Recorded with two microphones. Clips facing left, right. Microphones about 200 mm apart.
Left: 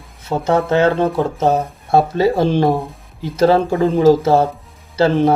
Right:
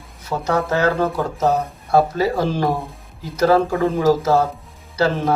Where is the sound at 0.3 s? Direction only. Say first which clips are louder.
Left 4 dB; 25° left (ahead or behind).